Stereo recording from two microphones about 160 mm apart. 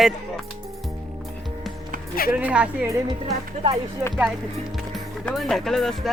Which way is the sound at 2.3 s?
5° right (ahead or behind).